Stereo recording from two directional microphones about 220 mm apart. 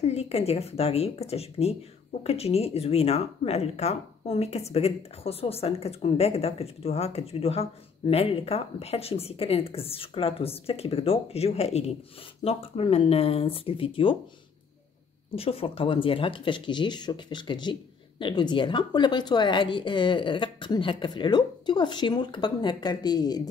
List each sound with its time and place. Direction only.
0.0 s speech: 30° left (ahead or behind)
15.3 s speech: 25° left (ahead or behind)